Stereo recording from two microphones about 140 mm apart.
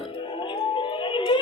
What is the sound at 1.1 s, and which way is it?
Music, 35° left (ahead or behind).